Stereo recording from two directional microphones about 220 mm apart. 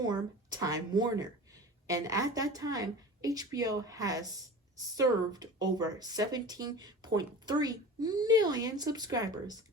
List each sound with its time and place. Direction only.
0.0 s a woman's voice: 20° right (ahead or behind)